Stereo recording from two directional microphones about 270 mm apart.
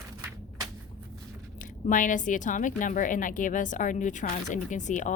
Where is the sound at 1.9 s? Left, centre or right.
Left.